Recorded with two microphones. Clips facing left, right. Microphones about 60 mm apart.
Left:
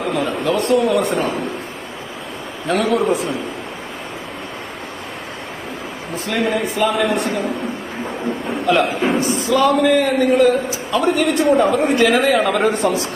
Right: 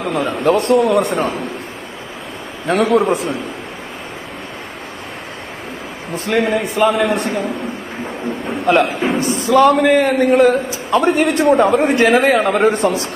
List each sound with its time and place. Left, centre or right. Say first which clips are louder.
0.0 s a man's voice: right 3 dB; right
2.7 s a man's voice: right 4 dB; right
3.0 s a man's voice: right 2 dB; right
6.1 s a man's voice: right 3 dB; right
6.9 s a man's voice: right 2 dB; right
7.2 s a man's voice: right 1 dB; right
8.7 s a man's voice: right 2 dB; right